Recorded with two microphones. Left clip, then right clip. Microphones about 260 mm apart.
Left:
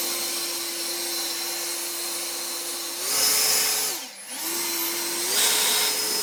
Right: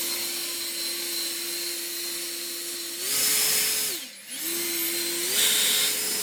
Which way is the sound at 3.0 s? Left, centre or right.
Centre.